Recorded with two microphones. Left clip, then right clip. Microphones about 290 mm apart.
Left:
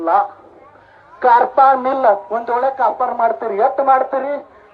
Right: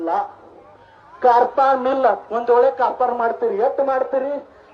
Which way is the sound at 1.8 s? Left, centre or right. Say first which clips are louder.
Left 3 dB; centre.